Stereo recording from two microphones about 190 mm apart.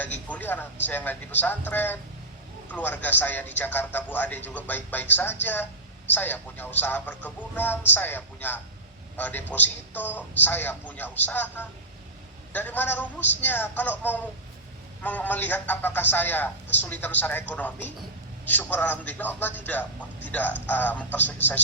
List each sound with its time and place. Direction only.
0.3 s a man's voice: 10° left (ahead or behind)